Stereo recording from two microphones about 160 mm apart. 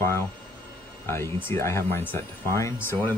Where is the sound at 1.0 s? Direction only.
15° left (ahead or behind).